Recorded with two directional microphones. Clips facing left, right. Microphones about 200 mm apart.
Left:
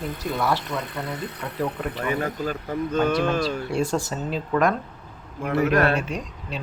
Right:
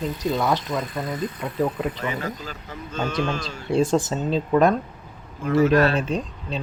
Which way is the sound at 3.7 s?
20° right (ahead or behind).